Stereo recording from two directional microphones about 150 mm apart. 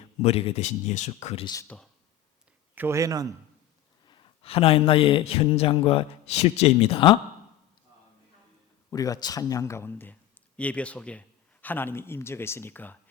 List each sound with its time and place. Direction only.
0.2 s speech: 45° left (ahead or behind)
1.6 s a man's voice: 5° left (ahead or behind)
2.7 s a man's voice: 15° right (ahead or behind)
4.0 s speech: 30° left (ahead or behind)
8.9 s a man's voice: 25° left (ahead or behind)